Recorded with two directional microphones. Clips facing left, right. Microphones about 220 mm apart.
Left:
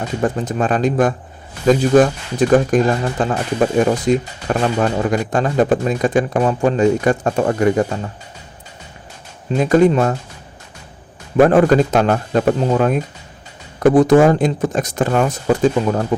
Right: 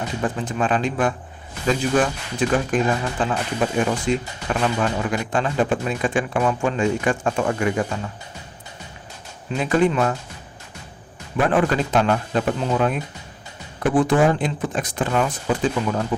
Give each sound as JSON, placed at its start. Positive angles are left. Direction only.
{"t": 0.2, "sound": "speech", "side_deg": 45}
{"t": 9.6, "sound": "speech", "side_deg": 40}
{"t": 11.3, "sound": "a man's voice", "side_deg": 45}